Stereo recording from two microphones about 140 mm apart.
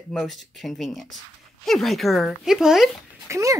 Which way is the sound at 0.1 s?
Centre (ahead or behind).